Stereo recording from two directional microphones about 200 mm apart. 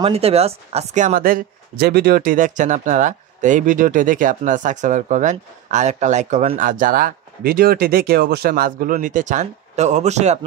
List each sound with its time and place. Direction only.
0.0 s speech: 30° right (ahead or behind)